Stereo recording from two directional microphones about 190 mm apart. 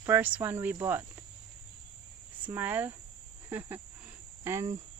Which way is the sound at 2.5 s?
10° right (ahead or behind).